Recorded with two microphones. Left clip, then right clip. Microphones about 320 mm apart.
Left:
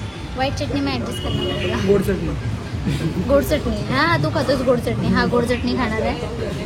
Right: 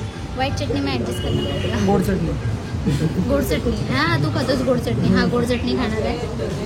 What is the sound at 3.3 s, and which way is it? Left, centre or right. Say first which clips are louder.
Speech: left 4 dB; centre.